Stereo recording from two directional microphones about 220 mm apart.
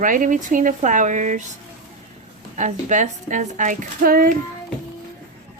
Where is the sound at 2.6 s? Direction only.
35° right (ahead or behind).